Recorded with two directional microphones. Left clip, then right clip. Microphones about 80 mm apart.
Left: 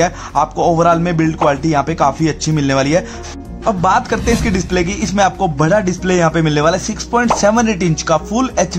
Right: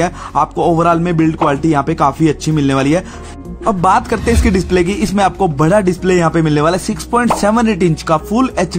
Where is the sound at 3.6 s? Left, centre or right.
Right.